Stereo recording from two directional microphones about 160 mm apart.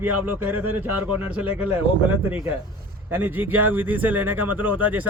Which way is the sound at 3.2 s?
10° right (ahead or behind).